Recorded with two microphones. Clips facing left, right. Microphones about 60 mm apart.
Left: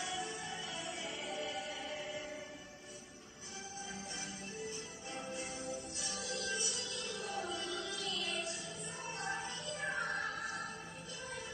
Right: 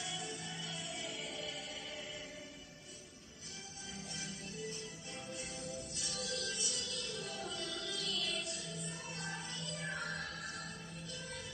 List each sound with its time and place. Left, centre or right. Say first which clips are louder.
0.1 s music: left 3 dB; left
5.1 s music: left 5 dB; left